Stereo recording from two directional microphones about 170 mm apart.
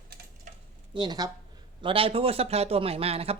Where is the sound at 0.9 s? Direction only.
25° right (ahead or behind).